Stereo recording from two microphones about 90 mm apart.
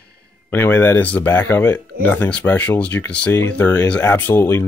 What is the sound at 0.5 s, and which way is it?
Speech, 25° left (ahead or behind).